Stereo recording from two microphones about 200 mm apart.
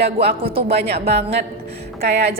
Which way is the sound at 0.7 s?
55° right (ahead or behind).